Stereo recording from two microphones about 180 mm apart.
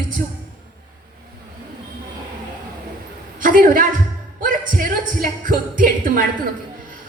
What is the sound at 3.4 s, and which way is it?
A woman's voice, 50° right (ahead or behind).